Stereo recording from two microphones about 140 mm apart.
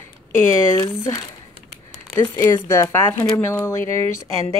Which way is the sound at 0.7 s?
25° left (ahead or behind).